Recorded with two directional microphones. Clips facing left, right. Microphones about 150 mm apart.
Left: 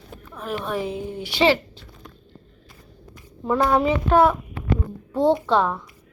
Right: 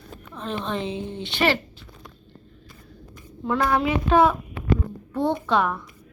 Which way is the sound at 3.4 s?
20° left (ahead or behind).